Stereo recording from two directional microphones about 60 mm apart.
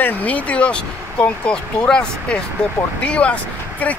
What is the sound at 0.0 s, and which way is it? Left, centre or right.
Speech, left.